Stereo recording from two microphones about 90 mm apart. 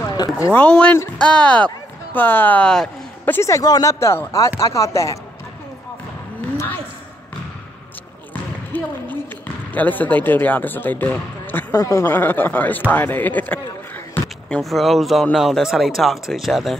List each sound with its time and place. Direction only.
0.1 s speech: 45° left (ahead or behind)
0.5 s speech: 15° left (ahead or behind)
3.3 s speech: 30° left (ahead or behind)
4.0 s speech: 30° left (ahead or behind)
8.7 s a sound: 20° left (ahead or behind)
9.7 s speech: 20° left (ahead or behind)
11.7 s speech: 40° left (ahead or behind)
12.0 s speech: 20° left (ahead or behind)
14.5 s speech: centre (ahead or behind)